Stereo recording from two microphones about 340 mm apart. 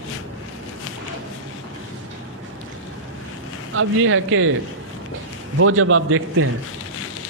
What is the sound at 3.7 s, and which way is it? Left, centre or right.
Speech, right.